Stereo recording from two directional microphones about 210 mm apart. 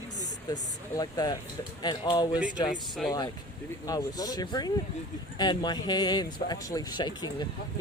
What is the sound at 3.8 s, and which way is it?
Speech, 15° left (ahead or behind).